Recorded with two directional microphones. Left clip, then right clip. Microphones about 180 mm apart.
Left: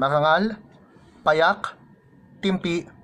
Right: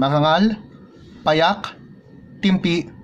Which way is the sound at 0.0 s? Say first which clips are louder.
Right 2 dB; 5° right (ahead or behind).